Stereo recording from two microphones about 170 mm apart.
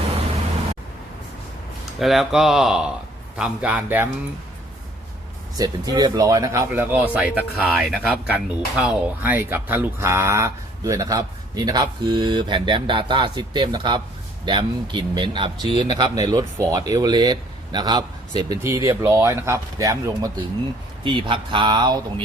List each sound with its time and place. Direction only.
2.0 s speech: centre (ahead or behind)
5.5 s speech: 20° right (ahead or behind)
21.0 s speech: 30° right (ahead or behind)